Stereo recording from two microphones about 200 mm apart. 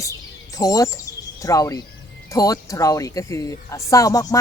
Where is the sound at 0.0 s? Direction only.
15° left (ahead or behind).